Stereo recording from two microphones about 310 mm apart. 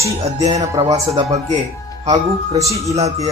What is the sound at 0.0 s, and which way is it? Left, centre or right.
Speech, centre.